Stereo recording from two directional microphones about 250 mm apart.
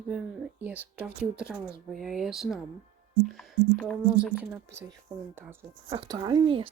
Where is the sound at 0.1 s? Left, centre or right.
Centre.